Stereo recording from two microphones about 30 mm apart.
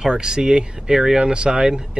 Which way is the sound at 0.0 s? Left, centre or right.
Right.